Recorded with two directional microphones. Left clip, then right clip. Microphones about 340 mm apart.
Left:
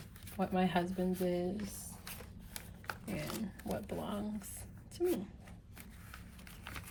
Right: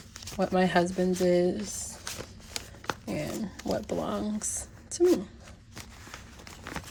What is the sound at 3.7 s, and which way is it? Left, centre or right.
Speech, centre.